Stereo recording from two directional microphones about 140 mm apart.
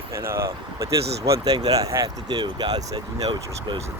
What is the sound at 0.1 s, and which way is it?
Speech, 20° right (ahead or behind).